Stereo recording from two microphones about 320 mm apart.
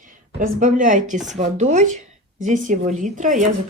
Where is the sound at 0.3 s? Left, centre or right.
Right.